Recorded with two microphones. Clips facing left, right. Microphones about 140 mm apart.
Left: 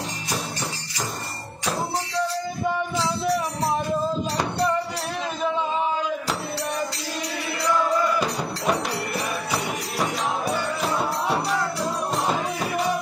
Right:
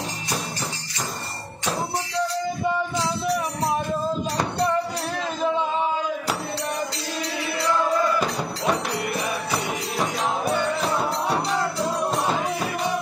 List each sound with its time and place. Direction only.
8.2 s music: centre (ahead or behind)
11.3 s music: 15° right (ahead or behind)